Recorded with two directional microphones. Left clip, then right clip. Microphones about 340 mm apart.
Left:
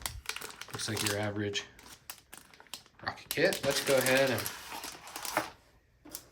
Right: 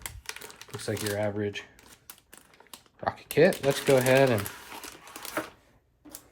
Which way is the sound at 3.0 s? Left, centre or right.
Centre.